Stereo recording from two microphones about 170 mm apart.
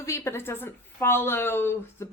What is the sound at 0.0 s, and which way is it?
Speech, 15° left (ahead or behind).